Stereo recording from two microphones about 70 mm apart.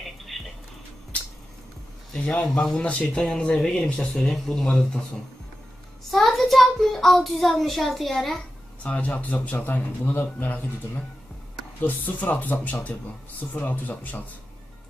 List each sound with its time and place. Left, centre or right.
0.3 s a sound: centre
2.1 s speech: centre
6.0 s a child's voice: centre
8.8 s speech: centre
11.8 s speech: left